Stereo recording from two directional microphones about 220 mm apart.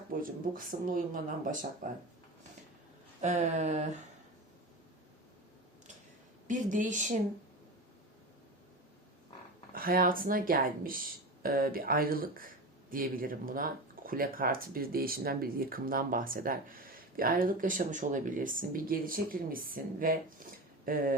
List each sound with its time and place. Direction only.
0.1 s speech: 40° right (ahead or behind)
3.2 s speech: 35° right (ahead or behind)
6.5 s speech: 35° right (ahead or behind)
9.7 s speech: 40° right (ahead or behind)